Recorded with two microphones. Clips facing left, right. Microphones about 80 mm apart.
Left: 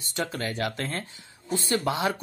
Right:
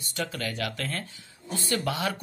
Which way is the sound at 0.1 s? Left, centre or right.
Left.